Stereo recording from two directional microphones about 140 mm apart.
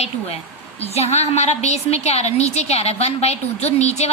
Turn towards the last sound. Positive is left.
turn(degrees=50)  # may be behind; listen again after turning